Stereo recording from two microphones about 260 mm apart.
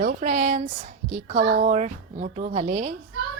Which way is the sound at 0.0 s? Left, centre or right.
Right.